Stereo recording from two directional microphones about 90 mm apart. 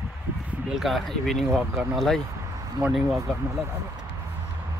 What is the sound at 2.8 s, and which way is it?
Speech, 45° right (ahead or behind).